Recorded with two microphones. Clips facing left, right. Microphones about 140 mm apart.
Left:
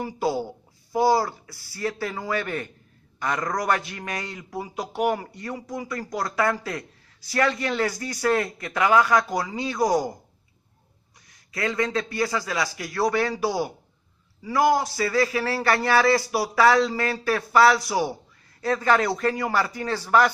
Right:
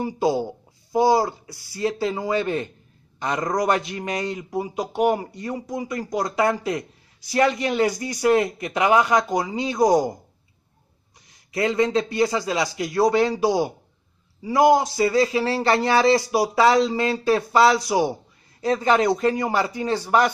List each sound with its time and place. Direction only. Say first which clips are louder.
0.0 s speech: right 4 dB; 20° right (ahead or behind)
11.5 s speech: right 5 dB; 20° right (ahead or behind)